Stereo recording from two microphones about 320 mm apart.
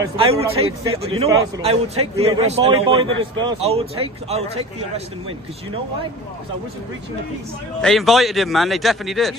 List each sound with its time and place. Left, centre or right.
0.0 s a man's voice: centre
7.8 s a man's voice: centre